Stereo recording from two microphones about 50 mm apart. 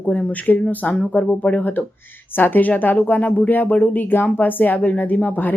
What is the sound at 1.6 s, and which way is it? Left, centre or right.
Speech, left.